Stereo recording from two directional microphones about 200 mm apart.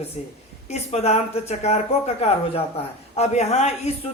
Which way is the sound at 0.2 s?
35° left (ahead or behind).